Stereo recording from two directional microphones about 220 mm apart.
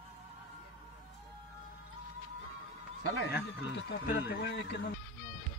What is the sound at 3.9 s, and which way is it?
Speech, 50° left (ahead or behind).